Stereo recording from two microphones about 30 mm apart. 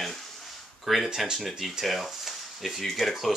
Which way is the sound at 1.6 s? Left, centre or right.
Centre.